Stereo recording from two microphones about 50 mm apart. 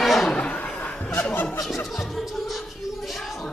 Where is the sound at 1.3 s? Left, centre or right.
Left.